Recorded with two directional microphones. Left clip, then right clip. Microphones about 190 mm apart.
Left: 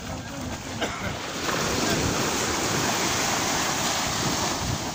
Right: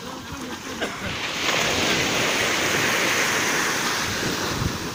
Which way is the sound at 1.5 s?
50° left (ahead or behind).